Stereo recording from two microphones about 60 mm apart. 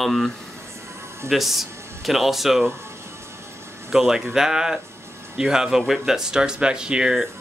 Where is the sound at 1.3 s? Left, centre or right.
Centre.